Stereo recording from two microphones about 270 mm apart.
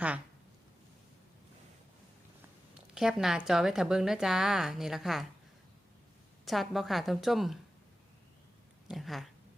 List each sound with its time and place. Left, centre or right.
2.7 s speech: centre
6.4 s speech: centre
8.9 s a sound: centre